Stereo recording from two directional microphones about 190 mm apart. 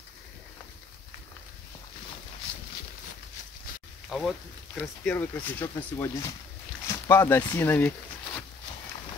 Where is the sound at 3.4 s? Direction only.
40° left (ahead or behind).